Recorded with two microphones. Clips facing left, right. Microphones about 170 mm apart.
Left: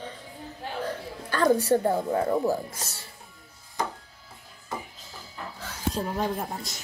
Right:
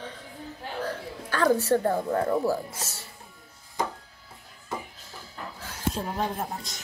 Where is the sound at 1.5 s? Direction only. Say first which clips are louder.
Left 1 dB; 15° left (ahead or behind).